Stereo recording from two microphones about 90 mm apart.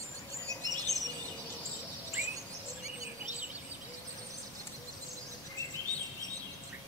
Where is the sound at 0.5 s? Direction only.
35° right (ahead or behind).